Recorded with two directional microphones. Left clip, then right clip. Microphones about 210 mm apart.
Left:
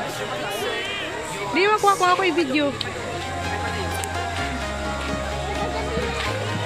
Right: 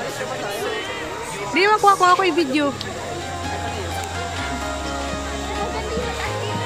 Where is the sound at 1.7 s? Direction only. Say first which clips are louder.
Right 5 dB; 15° right (ahead or behind).